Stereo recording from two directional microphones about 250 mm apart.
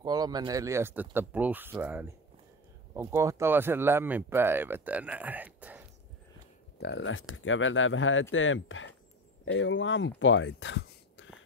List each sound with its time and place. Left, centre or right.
0.0 s speech: centre
6.8 s speech: left